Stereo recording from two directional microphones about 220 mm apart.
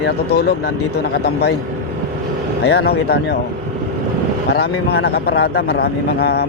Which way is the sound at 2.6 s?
45° left (ahead or behind).